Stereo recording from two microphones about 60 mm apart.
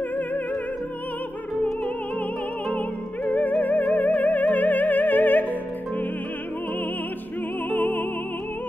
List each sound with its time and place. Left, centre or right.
3.3 s music: left
7.7 s music: left